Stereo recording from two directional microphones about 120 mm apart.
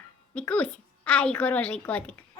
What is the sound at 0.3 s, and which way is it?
A child's voice, 10° left (ahead or behind).